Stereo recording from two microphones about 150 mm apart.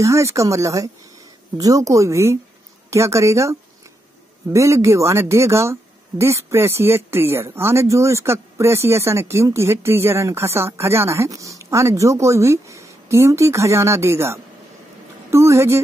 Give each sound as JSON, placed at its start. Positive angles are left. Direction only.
{"t": 0.0, "sound": "speech", "side_deg": -20}